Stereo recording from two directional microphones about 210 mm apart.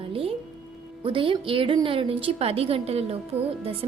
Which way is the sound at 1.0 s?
25° right (ahead or behind).